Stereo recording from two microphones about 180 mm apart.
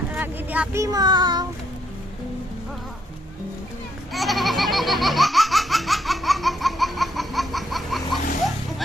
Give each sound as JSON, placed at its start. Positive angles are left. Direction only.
{"t": 0.1, "sound": "speech", "side_deg": -10}
{"t": 4.1, "sound": "laughter", "side_deg": 0}